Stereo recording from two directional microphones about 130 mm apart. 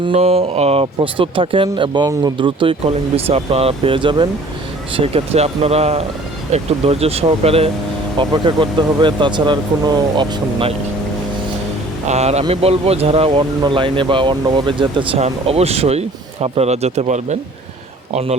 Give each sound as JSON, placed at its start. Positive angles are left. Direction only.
{"t": 0.0, "sound": "speech", "side_deg": -50}
{"t": 4.9, "sound": "speech", "side_deg": -50}
{"t": 8.2, "sound": "speech", "side_deg": -35}
{"t": 12.0, "sound": "speech", "side_deg": -55}
{"t": 15.2, "sound": "speech", "side_deg": -50}